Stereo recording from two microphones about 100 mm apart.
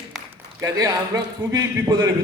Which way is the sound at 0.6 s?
40° right (ahead or behind).